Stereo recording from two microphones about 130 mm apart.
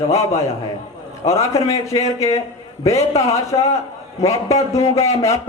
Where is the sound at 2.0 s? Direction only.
55° left (ahead or behind).